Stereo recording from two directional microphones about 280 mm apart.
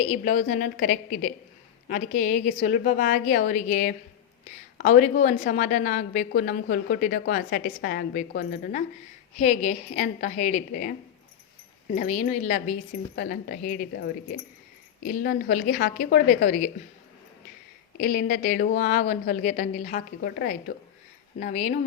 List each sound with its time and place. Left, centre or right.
0.0 s a woman's voice: left
9.4 s a woman's voice: left
11.9 s a woman's voice: left
18.0 s a woman's voice: left